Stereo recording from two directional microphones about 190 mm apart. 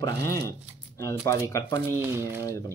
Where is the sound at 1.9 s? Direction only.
15° right (ahead or behind).